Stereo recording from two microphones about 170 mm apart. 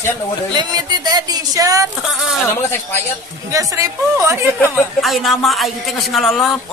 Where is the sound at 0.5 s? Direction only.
25° right (ahead or behind).